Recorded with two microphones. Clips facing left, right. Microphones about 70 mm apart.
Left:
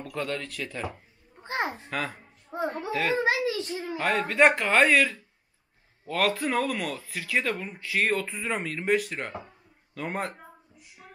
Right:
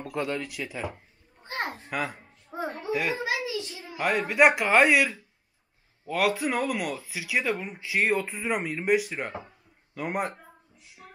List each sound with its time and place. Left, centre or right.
0.0 s speech: centre
1.4 s a sound: left
1.9 s a child's voice: centre
3.4 s a child's voice: left
4.0 s speech: centre
11.0 s music: centre